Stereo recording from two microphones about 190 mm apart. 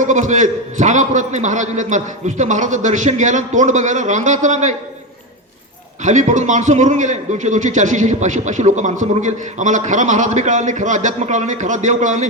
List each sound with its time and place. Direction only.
0.0 s a man's voice: 40° right (ahead or behind)
6.0 s a man's voice: 40° right (ahead or behind)